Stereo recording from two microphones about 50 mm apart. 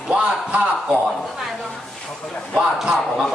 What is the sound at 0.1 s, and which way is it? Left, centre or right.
Speech, right.